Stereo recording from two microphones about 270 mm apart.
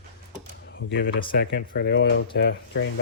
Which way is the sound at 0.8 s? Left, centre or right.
Left.